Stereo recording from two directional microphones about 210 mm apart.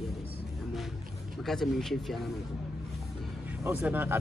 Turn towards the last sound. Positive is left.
turn(degrees=-10)  # may be behind; listen again after turning